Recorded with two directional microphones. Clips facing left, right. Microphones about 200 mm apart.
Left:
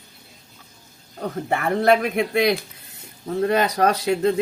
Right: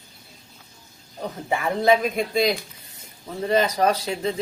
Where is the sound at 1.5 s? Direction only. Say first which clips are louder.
Left 1 dB; 65° left (ahead or behind).